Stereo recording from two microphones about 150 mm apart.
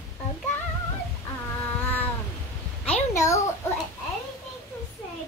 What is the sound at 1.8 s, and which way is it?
Cat, 10° left (ahead or behind).